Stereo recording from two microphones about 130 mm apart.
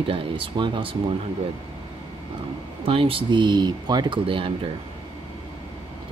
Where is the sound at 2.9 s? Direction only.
45° right (ahead or behind).